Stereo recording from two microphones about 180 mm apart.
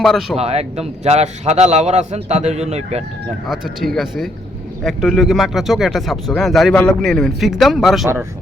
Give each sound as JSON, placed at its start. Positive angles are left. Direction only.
{"t": 0.0, "sound": "speech", "side_deg": 0}
{"t": 0.3, "sound": "a man's voice", "side_deg": -35}
{"t": 3.4, "sound": "speech", "side_deg": 0}